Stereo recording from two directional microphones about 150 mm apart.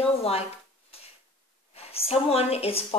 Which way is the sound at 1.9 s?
40° left (ahead or behind).